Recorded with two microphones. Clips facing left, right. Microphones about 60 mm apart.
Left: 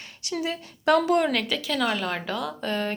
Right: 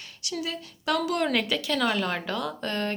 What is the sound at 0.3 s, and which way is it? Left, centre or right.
Speech, left.